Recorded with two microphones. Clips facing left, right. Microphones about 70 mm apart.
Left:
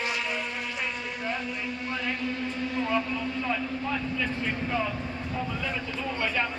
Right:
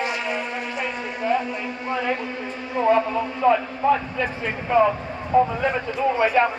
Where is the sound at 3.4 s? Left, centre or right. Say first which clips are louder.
Right 11 dB; right.